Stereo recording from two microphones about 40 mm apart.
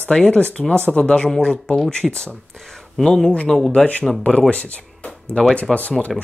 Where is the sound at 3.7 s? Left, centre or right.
Left.